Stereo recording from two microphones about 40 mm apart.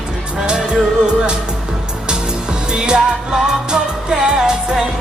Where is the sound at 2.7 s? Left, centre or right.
Right.